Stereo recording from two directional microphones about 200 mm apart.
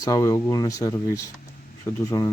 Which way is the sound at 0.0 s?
15° left (ahead or behind).